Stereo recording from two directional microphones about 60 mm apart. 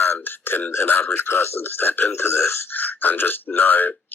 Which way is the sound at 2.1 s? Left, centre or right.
Left.